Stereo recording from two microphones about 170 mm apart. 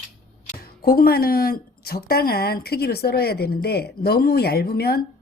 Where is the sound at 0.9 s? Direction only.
65° left (ahead or behind).